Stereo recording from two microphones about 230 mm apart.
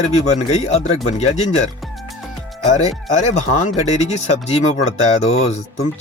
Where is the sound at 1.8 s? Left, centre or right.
Centre.